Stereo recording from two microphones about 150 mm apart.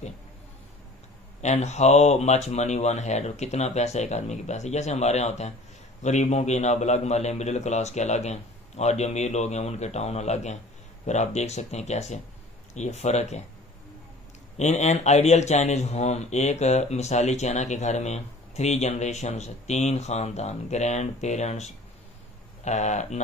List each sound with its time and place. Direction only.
1.4 s speech: 50° left (ahead or behind)
14.6 s speech: 50° left (ahead or behind)